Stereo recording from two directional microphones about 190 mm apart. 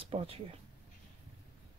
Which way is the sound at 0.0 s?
30° right (ahead or behind).